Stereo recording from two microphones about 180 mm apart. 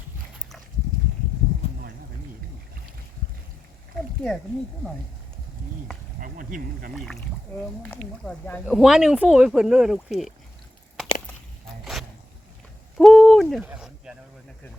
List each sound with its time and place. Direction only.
6.1 s speech: 50° right (ahead or behind)
6.9 s speech: centre (ahead or behind)
13.0 s owl: centre (ahead or behind)
13.7 s a sound: 5° right (ahead or behind)